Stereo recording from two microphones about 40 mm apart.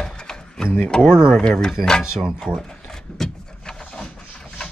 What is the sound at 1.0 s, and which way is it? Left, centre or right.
Speech, centre.